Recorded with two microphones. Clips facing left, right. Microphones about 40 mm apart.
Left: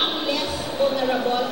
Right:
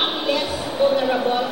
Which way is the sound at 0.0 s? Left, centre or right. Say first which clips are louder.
Right 2 dB; centre.